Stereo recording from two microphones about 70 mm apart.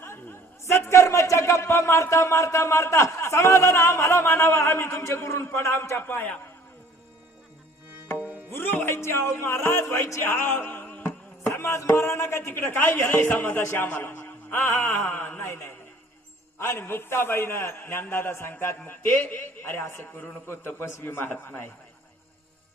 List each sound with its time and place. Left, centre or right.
0.0 s a man's voice: left
8.2 s tabla: right
8.5 s speech: left
9.4 s music: left
11.5 s music: left
12.5 s a man's voice: left
13.1 s a man's voice: left
15.4 s a man's voice: left